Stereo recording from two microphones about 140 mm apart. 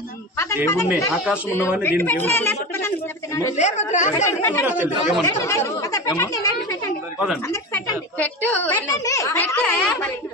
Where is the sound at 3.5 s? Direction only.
55° left (ahead or behind).